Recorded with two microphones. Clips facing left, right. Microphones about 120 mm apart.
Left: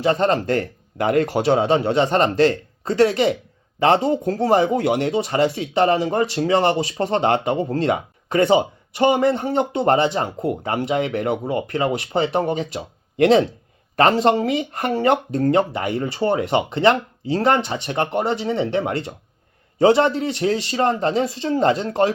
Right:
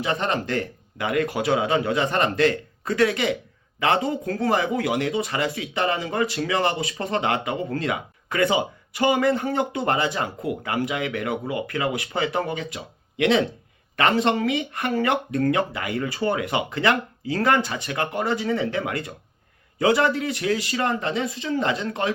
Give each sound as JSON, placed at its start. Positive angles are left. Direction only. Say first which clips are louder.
{"t": 0.0, "sound": "speech", "louder": "left 7 dB", "side_deg": 35}